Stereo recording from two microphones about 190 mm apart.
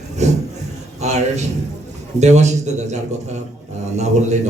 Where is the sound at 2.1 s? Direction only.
35° right (ahead or behind).